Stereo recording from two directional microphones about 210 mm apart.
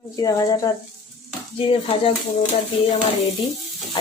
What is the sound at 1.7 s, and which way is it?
Speech, 25° left (ahead or behind).